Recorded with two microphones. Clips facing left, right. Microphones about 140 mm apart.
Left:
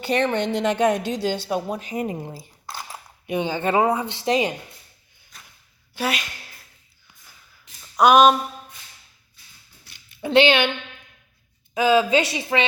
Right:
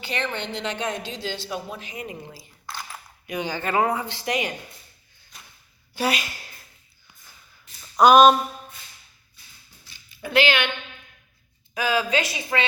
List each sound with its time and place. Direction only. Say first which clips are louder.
0.0 s a woman's voice: left 8 dB; 50° left (ahead or behind)
2.6 s speech: left 1 dB; 35° left (ahead or behind)
5.9 s a sound: right 1 dB; centre (ahead or behind)
7.9 s a sound: right 1 dB; 5° left (ahead or behind)
10.2 s a woman's voice: left 5 dB; 25° left (ahead or behind)
11.7 s a woman's voice: left 6 dB; 25° left (ahead or behind)